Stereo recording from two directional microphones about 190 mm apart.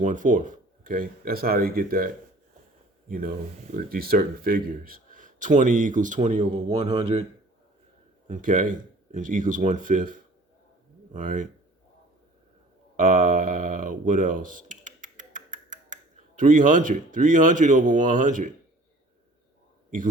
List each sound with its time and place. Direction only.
0.0 s speech: 45° right (ahead or behind)
3.1 s speech: 50° right (ahead or behind); by 7.3 s 30° right (ahead or behind)
8.3 s speech: 45° right (ahead or behind)
13.0 s speech: 45° right (ahead or behind)
19.9 s speech: 45° right (ahead or behind)